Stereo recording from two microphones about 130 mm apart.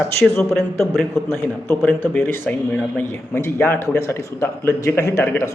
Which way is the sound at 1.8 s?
15° left (ahead or behind).